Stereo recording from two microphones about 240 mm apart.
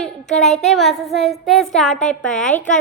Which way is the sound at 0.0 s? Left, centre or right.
Centre.